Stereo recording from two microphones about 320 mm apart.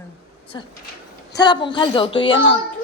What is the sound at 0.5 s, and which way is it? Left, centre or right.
Speech, centre.